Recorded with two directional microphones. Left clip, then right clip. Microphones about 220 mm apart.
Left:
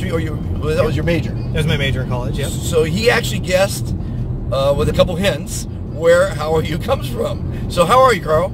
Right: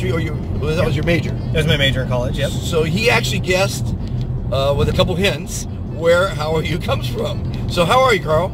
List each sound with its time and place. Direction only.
0.1 s speech: 25° left (ahead or behind)
1.5 s speech: 10° right (ahead or behind)
2.7 s speech: 25° left (ahead or behind)